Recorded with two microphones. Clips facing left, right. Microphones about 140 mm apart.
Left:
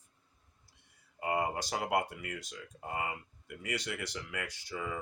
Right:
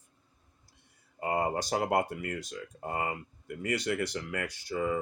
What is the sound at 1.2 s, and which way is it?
Speech, 40° right (ahead or behind).